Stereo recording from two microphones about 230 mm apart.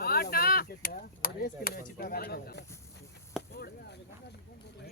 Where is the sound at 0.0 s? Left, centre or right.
Left.